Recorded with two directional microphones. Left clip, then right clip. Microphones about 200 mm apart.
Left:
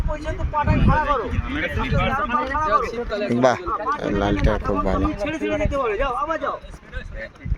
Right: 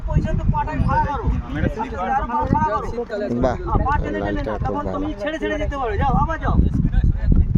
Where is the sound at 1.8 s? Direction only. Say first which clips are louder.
Right 1 dB; 35° right (ahead or behind).